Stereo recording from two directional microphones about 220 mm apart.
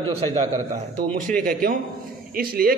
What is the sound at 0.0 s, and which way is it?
Speech, 25° right (ahead or behind).